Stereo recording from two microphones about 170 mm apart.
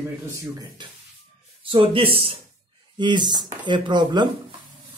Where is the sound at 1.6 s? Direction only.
35° right (ahead or behind).